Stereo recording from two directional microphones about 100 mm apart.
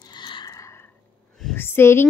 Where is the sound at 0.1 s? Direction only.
50° left (ahead or behind).